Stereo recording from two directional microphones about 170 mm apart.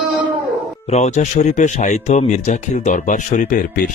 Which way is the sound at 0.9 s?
40° left (ahead or behind).